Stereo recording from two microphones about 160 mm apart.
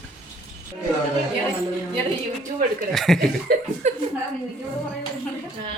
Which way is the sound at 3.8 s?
50° right (ahead or behind).